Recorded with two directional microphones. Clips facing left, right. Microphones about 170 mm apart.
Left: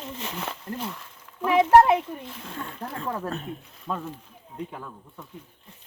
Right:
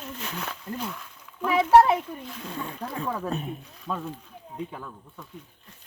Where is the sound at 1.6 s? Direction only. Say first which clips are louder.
Left 1 dB; 10° left (ahead or behind).